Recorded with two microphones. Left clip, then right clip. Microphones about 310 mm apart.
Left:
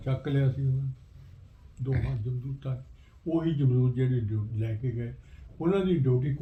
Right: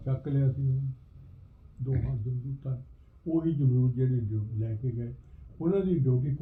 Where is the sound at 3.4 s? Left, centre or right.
Left.